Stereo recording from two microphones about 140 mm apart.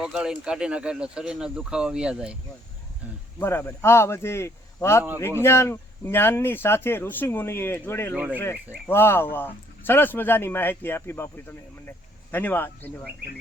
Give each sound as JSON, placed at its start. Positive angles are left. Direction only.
{"t": 0.0, "sound": "speech", "side_deg": -5}
{"t": 3.4, "sound": "speech", "side_deg": 15}
{"t": 8.1, "sound": "speech", "side_deg": -10}
{"t": 8.4, "sound": "speech", "side_deg": 15}